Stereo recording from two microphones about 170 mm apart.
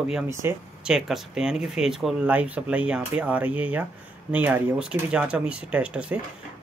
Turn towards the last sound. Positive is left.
turn(degrees=-5)  # may be behind; listen again after turning